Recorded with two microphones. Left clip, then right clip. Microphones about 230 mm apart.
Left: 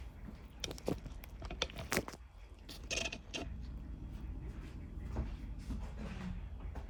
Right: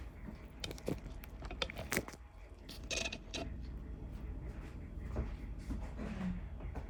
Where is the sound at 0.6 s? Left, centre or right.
Centre.